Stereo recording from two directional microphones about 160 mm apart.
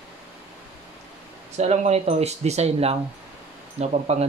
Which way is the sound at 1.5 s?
45° right (ahead or behind).